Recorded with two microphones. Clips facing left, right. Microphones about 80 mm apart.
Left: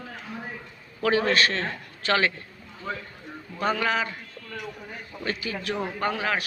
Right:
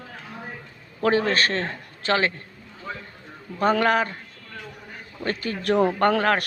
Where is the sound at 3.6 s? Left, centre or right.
Right.